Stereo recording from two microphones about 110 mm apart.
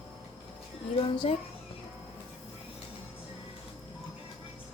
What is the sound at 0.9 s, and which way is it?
Speech, 55° left (ahead or behind).